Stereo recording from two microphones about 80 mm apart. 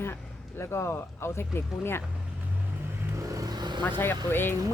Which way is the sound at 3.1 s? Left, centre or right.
Right.